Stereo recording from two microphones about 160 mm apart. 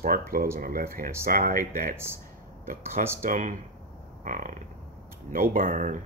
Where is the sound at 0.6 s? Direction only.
65° right (ahead or behind).